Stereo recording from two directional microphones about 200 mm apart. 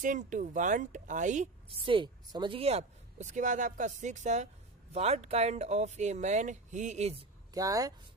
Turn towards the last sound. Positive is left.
turn(degrees=-20)  # may be behind; listen again after turning